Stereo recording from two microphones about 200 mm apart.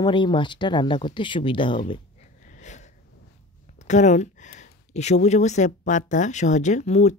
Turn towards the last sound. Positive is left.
turn(degrees=35)  # may be behind; listen again after turning